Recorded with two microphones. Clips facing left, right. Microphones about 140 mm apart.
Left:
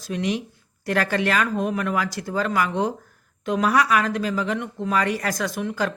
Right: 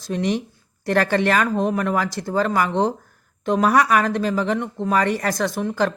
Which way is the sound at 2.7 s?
65° right (ahead or behind).